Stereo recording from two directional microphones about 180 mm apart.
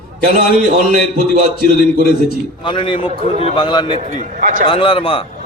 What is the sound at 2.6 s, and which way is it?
A man's voice, 25° left (ahead or behind).